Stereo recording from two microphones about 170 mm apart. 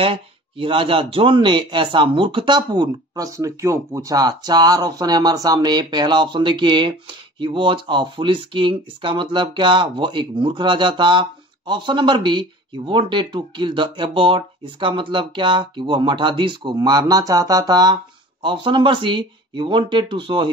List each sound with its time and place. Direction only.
0.0 s speech: 30° right (ahead or behind)